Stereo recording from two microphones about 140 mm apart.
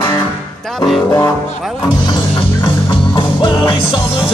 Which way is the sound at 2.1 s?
35° left (ahead or behind).